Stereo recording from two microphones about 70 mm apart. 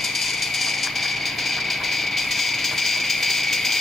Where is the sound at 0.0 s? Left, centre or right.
Centre.